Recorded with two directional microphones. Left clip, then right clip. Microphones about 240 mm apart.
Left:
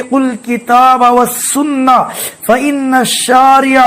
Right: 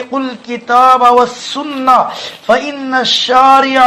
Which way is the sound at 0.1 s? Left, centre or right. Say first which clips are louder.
Left 8 dB; left.